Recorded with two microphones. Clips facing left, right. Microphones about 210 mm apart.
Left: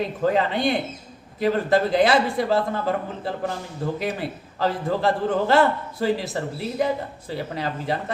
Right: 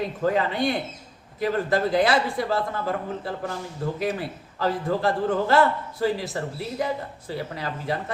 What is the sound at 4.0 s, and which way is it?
A man's voice, 25° left (ahead or behind).